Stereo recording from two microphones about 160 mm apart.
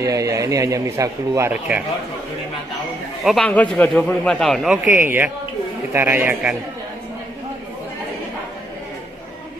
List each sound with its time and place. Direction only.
0.0 s speech: 20° right (ahead or behind)
3.3 s a man's voice: 5° left (ahead or behind)
4.9 s a man's voice: 15° right (ahead or behind)